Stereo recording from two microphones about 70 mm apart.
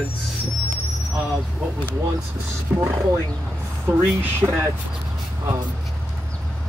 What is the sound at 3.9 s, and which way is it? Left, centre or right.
Speech, right.